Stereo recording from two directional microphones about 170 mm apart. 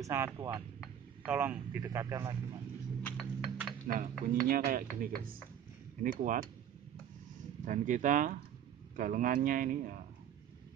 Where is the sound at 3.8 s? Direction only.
55° right (ahead or behind).